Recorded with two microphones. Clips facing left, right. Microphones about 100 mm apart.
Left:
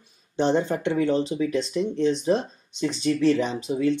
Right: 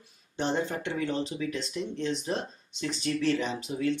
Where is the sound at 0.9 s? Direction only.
30° left (ahead or behind).